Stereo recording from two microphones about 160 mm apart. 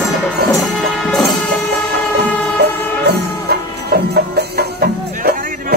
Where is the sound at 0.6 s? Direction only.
Centre (ahead or behind).